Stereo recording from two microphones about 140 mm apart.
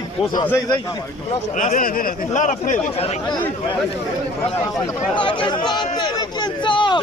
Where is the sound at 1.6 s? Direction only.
70° left (ahead or behind).